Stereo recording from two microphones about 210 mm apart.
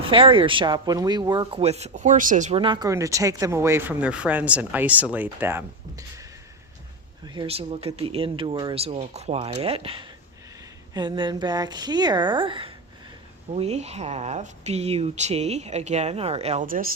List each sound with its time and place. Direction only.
0.1 s speech: 25° right (ahead or behind)
2.6 s speech: 20° right (ahead or behind)
7.3 s speech: 30° right (ahead or behind)